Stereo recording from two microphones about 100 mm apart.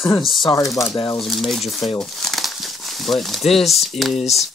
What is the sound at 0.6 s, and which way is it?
Speech, 35° left (ahead or behind).